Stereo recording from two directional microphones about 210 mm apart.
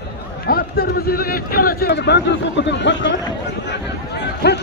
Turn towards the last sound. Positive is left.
turn(degrees=55)  # may be behind; listen again after turning